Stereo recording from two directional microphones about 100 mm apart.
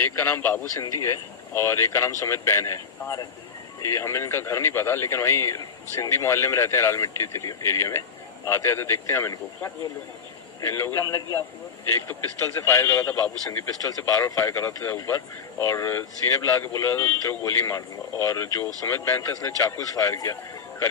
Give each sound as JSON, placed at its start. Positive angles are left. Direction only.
{"t": 0.0, "sound": "speech", "side_deg": 25}
{"t": 10.6, "sound": "speech", "side_deg": 25}
{"t": 11.0, "sound": "speech", "side_deg": 35}
{"t": 13.0, "sound": "a man's voice", "side_deg": 15}
{"t": 14.1, "sound": "speech", "side_deg": 35}